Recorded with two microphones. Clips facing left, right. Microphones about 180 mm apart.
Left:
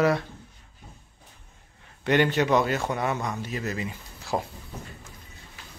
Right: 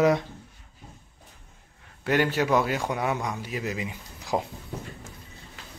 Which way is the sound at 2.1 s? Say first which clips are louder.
Left 2 dB; 5° right (ahead or behind).